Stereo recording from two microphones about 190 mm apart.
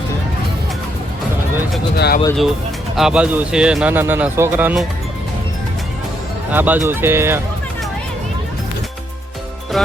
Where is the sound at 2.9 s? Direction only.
5° right (ahead or behind).